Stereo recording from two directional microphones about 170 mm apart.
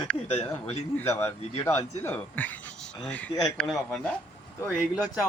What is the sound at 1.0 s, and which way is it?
Speech, 15° left (ahead or behind).